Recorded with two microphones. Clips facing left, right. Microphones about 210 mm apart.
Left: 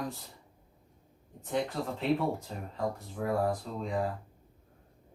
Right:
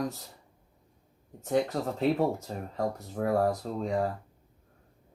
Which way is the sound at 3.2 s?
55° right (ahead or behind).